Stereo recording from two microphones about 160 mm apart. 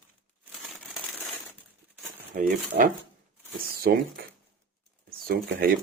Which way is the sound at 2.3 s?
60° right (ahead or behind).